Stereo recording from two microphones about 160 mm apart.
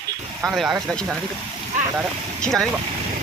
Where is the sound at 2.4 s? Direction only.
5° left (ahead or behind).